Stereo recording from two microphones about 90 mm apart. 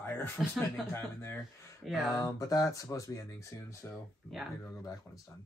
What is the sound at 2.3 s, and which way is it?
Speech, 40° left (ahead or behind).